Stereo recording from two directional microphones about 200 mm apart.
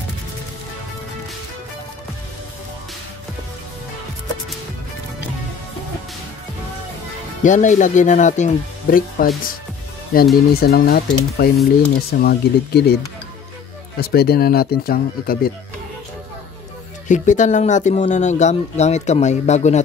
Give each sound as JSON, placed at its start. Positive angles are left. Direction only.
{"t": 7.4, "sound": "speech", "side_deg": 40}
{"t": 17.1, "sound": "speech", "side_deg": 40}